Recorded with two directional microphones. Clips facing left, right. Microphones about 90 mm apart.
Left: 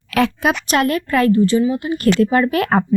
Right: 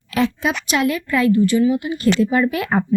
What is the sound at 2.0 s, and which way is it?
Speech, 50° left (ahead or behind).